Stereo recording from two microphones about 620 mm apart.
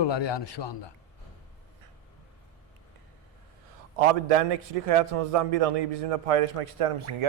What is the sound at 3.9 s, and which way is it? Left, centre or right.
A man's voice, right.